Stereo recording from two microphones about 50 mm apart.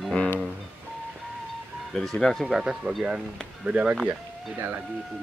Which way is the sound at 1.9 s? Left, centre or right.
Centre.